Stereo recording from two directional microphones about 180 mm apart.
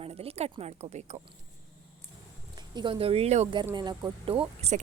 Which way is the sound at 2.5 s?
25° right (ahead or behind).